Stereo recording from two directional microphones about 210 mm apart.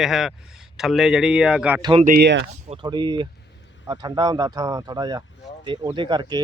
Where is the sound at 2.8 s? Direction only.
20° right (ahead or behind).